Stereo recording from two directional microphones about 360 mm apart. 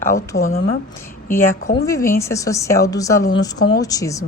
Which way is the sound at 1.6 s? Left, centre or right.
Centre.